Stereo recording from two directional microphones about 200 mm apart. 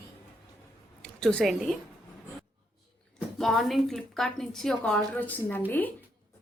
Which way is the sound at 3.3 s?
Centre (ahead or behind).